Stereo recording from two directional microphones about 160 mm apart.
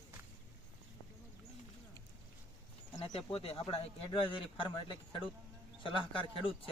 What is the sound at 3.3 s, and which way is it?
Speech, 35° left (ahead or behind).